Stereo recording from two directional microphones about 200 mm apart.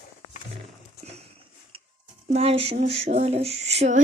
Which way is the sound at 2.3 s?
30° right (ahead or behind).